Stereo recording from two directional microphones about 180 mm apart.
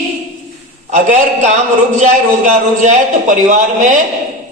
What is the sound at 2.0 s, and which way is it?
A man's voice, 40° right (ahead or behind).